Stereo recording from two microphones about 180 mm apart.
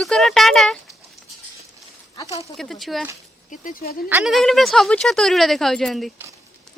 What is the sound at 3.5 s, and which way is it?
Speech, 50° left (ahead or behind).